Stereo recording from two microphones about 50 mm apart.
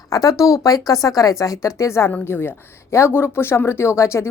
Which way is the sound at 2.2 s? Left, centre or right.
Left.